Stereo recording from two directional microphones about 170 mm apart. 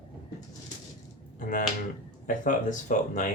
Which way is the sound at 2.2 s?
50° left (ahead or behind).